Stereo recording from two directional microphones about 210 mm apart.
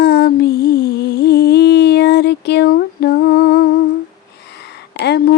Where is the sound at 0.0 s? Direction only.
50° left (ahead or behind).